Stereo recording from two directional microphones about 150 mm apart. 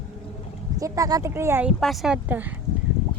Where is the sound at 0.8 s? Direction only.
20° right (ahead or behind).